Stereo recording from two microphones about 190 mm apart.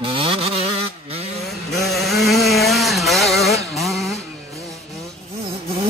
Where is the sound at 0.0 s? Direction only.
30° right (ahead or behind).